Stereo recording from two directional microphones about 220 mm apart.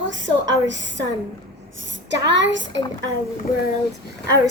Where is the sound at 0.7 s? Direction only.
55° right (ahead or behind).